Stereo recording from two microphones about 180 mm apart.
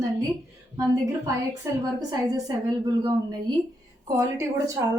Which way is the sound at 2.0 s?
20° right (ahead or behind).